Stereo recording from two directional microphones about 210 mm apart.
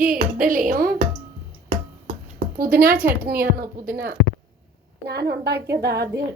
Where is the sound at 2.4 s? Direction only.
45° right (ahead or behind).